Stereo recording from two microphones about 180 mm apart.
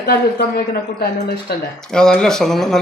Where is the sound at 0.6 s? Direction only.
60° left (ahead or behind).